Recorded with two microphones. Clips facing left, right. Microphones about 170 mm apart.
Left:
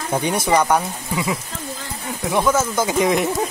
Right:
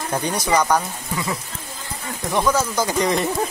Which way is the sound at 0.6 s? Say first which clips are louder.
Left 1 dB; 5° left (ahead or behind).